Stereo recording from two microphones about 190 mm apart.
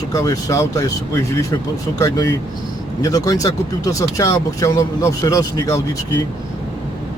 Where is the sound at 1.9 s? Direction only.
15° left (ahead or behind).